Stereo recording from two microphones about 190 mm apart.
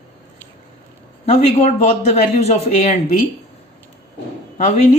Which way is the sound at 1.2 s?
35° left (ahead or behind).